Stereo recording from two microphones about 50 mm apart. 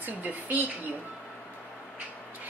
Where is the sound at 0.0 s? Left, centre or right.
Right.